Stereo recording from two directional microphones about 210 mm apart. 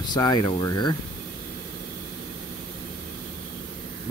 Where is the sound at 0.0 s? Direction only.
20° left (ahead or behind).